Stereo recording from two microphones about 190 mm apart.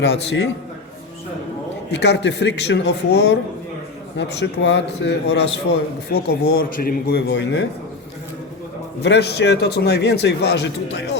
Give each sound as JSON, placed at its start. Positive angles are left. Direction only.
{"t": 0.0, "sound": "speech", "side_deg": 65}
{"t": 1.9, "sound": "a man's voice", "side_deg": 65}
{"t": 9.0, "sound": "speech", "side_deg": 60}